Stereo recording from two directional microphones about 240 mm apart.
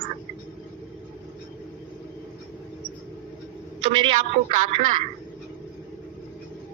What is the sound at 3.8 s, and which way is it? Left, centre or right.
Speech, right.